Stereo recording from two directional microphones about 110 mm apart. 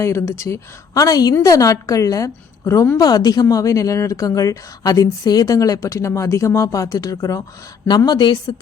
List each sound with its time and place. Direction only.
0.0 s a woman's voice: 25° left (ahead or behind)
3.0 s speech: 35° left (ahead or behind)